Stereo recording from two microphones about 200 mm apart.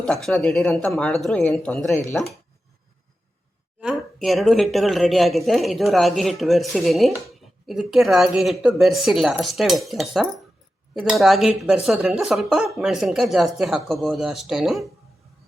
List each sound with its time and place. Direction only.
0.0 s a woman's voice: centre (ahead or behind)
3.8 s a woman's voice: centre (ahead or behind)